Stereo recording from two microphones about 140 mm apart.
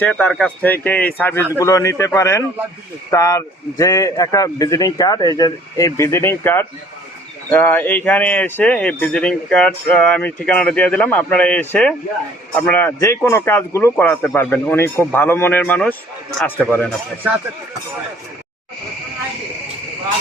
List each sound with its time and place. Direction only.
0.0 s a man's voice: 10° left (ahead or behind)